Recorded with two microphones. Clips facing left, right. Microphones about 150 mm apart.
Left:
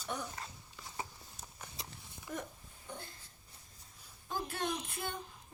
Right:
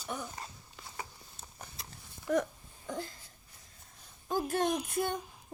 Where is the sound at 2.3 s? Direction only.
90° right.